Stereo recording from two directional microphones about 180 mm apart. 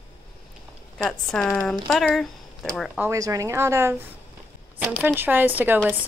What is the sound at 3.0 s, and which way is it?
A woman's voice, 15° right (ahead or behind).